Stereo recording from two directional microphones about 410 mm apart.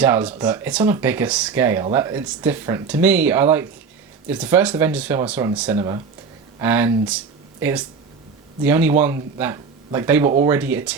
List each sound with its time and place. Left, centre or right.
0.0 s speech: centre